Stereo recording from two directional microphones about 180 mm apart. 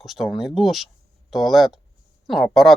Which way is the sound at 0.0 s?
Centre (ahead or behind).